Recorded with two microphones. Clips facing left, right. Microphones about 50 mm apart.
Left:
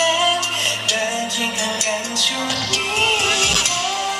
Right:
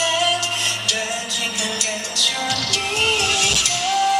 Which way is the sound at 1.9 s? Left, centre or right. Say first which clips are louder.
Left 2 dB; left.